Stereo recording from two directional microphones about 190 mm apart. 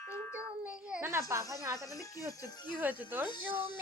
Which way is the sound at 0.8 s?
5° right (ahead or behind).